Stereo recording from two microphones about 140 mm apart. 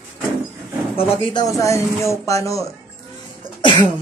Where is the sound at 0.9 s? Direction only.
40° left (ahead or behind); by 2.7 s 20° left (ahead or behind).